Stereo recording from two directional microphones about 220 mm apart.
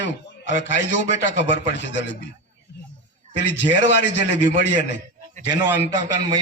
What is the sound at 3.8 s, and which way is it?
Speech, 55° left (ahead or behind).